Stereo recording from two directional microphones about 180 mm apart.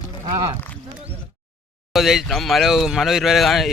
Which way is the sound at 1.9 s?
Centre (ahead or behind).